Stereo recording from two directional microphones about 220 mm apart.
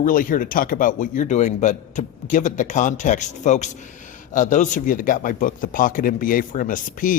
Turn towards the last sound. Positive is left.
turn(degrees=40)  # may be behind; listen again after turning